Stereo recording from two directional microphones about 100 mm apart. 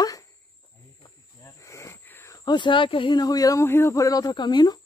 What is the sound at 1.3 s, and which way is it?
Wheeze, 30° left (ahead or behind).